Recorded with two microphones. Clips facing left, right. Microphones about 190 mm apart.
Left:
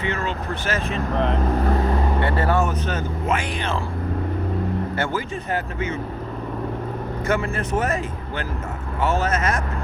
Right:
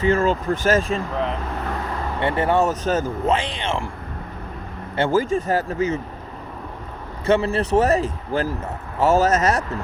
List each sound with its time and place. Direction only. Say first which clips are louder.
0.0 s speech: right 7 dB; 45° right (ahead or behind)
2.2 s speech: right 5 dB; 25° right (ahead or behind)
2.6 s speech: right 4 dB; 40° right (ahead or behind)
3.3 s speech: right 1 dB; 25° right (ahead or behind)
5.1 s speech: right 8 dB; 45° right (ahead or behind)
7.3 s speech: right 6 dB; 30° right (ahead or behind)